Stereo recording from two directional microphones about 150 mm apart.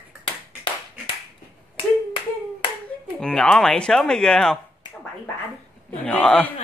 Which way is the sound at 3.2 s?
5° left (ahead or behind).